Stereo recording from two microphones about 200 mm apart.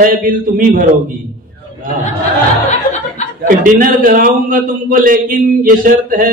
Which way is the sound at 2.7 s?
35° left (ahead or behind).